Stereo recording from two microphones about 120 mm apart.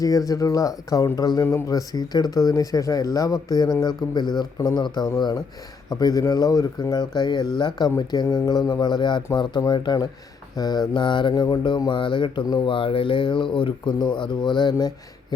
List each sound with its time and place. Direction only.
0.0 s speech: 30° left (ahead or behind)